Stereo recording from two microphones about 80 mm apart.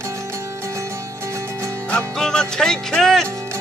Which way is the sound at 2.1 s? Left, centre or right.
Centre.